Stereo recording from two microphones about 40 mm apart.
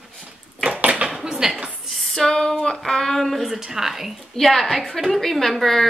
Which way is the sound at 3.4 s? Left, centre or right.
Centre.